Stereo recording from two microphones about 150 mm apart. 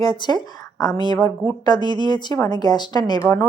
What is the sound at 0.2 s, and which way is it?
A woman's voice, 30° left (ahead or behind).